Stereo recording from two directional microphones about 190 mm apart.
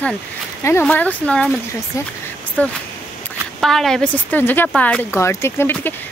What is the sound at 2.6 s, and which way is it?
Speech, 10° left (ahead or behind).